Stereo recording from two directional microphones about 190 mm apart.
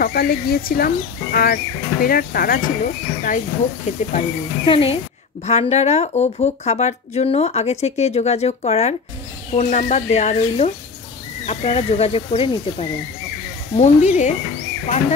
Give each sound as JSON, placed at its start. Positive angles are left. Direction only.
{"t": 0.0, "sound": "speech", "side_deg": 50}